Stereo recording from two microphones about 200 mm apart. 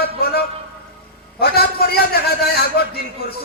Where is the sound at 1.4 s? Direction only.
50° left (ahead or behind).